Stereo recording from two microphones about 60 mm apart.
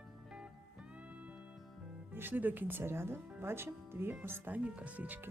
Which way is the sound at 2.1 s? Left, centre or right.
Right.